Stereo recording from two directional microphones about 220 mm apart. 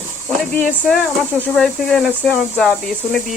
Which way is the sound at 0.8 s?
Centre (ahead or behind).